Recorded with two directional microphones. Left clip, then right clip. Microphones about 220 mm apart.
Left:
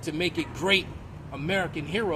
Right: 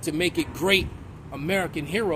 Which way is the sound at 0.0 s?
30° right (ahead or behind).